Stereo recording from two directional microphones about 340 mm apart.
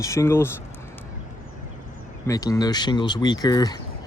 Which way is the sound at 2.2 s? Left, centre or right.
Centre.